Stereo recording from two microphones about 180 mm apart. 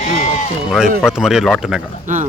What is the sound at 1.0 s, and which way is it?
Speech, 5° right (ahead or behind).